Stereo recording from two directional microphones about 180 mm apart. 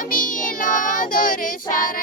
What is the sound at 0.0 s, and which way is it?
Child singing, 50° left (ahead or behind).